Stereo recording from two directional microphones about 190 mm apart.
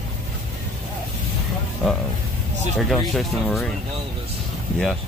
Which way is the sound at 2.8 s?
Centre (ahead or behind).